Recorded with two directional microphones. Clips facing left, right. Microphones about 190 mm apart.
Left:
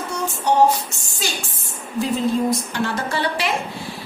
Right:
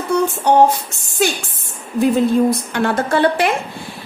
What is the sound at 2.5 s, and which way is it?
A woman's voice, 60° right (ahead or behind).